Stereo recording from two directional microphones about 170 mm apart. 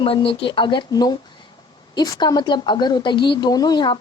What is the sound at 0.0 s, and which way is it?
A woman's voice, 30° left (ahead or behind).